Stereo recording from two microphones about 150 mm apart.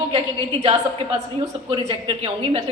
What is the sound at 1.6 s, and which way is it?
Speech, 35° right (ahead or behind).